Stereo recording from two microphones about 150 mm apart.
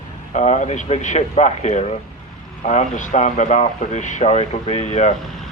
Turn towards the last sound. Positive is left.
turn(degrees=50)  # may be behind; listen again after turning